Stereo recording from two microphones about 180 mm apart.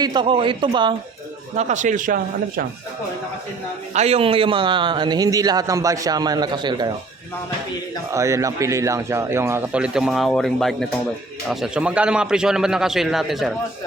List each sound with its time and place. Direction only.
0.0 s a man's voice: 25° right (ahead or behind)
1.5 s speech: 40° right (ahead or behind)
3.9 s a man's voice: 35° right (ahead or behind)
8.1 s a man's voice: 15° right (ahead or behind); by 13.5 s centre (ahead or behind)